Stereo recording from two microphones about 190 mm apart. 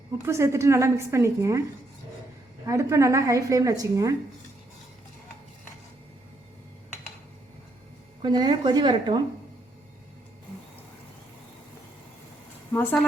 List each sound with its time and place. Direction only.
0.3 s a woman's voice: 15° right (ahead or behind)
2.6 s a woman's voice: 15° right (ahead or behind)
8.2 s a woman's voice: 20° right (ahead or behind)
12.7 s speech: 10° left (ahead or behind)